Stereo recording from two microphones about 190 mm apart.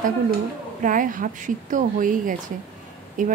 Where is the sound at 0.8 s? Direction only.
45° right (ahead or behind).